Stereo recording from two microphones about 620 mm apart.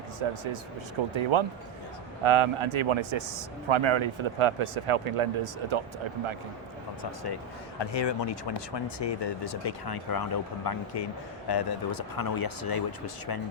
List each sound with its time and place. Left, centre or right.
0.2 s speech: right
7.8 s speech: left